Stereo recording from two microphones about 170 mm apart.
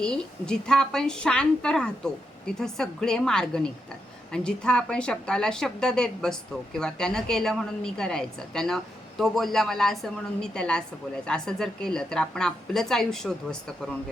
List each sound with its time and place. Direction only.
0.0 s a woman's voice: 5° left (ahead or behind)